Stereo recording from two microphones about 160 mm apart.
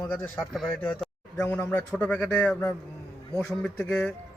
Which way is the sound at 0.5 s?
5° left (ahead or behind).